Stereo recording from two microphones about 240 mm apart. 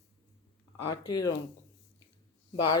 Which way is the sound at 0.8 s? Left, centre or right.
Centre.